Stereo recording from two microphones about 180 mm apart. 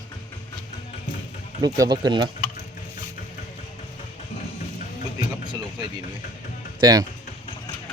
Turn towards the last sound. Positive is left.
turn(degrees=-25)  # may be behind; listen again after turning